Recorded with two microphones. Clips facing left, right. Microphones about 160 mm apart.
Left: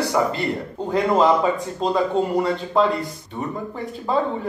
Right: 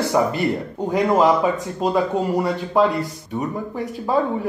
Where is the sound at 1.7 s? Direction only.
15° right (ahead or behind).